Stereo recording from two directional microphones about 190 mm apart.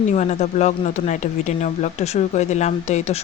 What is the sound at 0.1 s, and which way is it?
Speech, 35° left (ahead or behind).